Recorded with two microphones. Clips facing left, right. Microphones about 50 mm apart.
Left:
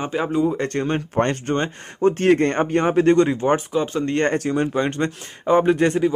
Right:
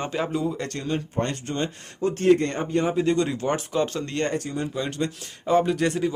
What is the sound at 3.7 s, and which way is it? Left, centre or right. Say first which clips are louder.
Speech: left 3 dB; centre.